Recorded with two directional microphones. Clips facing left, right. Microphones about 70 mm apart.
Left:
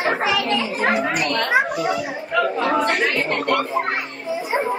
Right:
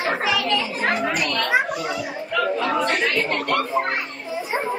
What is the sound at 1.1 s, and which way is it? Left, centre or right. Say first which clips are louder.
Speech: left 2 dB; left.